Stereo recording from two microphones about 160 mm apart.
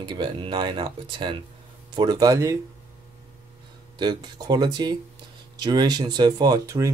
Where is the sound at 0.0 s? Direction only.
30° right (ahead or behind).